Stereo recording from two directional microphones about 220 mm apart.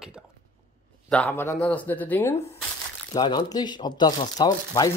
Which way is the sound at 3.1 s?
20° left (ahead or behind).